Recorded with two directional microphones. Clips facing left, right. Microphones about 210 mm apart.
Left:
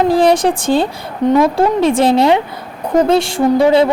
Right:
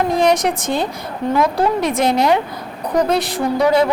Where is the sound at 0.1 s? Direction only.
30° left (ahead or behind).